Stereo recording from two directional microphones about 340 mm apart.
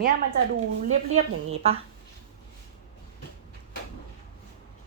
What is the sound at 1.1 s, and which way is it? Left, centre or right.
Speech, centre.